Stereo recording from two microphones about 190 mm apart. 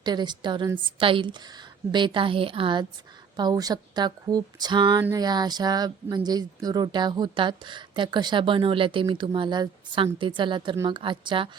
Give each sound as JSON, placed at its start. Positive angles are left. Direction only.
{"t": 0.0, "sound": "speech", "side_deg": -25}